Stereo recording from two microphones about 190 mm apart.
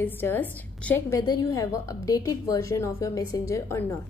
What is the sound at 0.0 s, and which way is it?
A woman's voice, 10° left (ahead or behind).